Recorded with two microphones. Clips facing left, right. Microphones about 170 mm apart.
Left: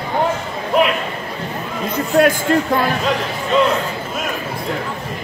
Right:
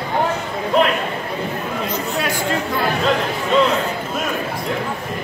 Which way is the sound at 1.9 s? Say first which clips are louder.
Left 12 dB; 55° left (ahead or behind).